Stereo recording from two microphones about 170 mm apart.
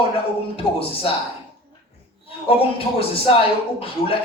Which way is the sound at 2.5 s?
35° left (ahead or behind).